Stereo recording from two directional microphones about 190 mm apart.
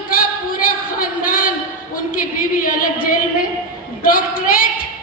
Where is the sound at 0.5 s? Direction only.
45° left (ahead or behind).